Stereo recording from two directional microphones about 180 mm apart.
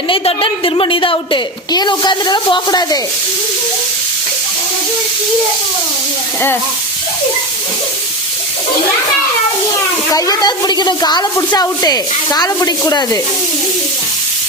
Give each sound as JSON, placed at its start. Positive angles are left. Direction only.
{"t": 0.1, "sound": "a woman's voice", "side_deg": 30}
{"t": 10.1, "sound": "a woman's voice", "side_deg": 20}